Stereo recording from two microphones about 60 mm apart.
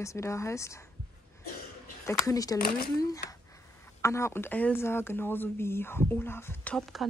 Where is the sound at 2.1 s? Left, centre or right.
Left.